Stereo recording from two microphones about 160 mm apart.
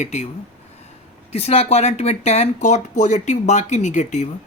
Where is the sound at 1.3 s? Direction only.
40° left (ahead or behind).